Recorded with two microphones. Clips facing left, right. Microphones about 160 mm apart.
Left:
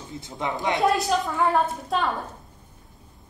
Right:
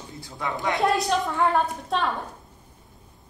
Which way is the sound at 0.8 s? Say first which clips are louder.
Even; centre (ahead or behind).